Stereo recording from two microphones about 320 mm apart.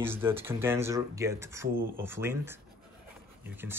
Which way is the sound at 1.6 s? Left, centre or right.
Right.